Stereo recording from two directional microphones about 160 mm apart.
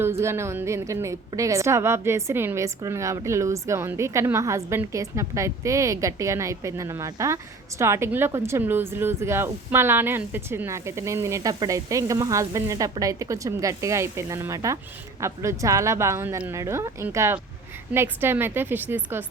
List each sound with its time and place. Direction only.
0.0 s a woman's voice: 15° right (ahead or behind)